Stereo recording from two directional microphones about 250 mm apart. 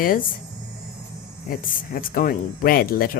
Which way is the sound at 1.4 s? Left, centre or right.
Left.